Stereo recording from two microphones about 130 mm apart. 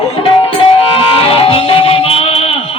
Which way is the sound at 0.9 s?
45° left (ahead or behind).